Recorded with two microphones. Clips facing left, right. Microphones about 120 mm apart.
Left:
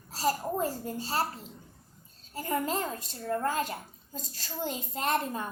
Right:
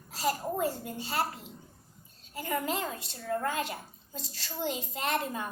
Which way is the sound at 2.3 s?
35° left (ahead or behind).